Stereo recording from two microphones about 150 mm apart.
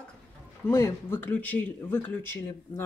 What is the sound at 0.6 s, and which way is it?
Speech, 15° left (ahead or behind).